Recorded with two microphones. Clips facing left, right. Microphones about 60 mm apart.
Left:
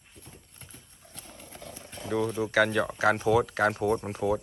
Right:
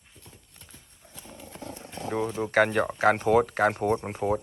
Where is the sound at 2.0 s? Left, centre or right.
Right.